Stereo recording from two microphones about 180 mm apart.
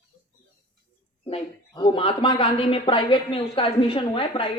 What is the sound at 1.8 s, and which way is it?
A woman's voice, 30° left (ahead or behind).